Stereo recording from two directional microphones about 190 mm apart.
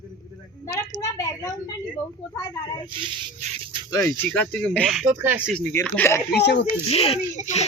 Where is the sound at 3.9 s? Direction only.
20° left (ahead or behind).